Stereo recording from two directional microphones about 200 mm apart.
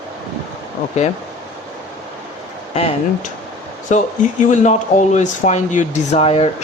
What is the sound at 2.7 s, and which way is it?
Speech, 30° left (ahead or behind).